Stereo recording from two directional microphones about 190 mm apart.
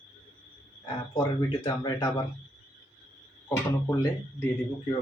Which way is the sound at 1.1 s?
25° left (ahead or behind).